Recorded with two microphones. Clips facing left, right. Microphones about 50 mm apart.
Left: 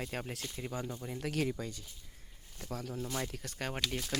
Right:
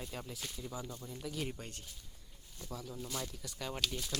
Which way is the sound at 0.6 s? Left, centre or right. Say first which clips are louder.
Left 5 dB; left.